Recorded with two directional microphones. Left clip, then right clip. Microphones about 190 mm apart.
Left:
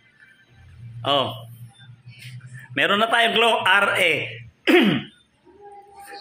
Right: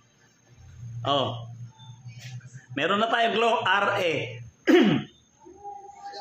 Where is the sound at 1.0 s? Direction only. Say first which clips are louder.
Left 4 dB; 15° left (ahead or behind).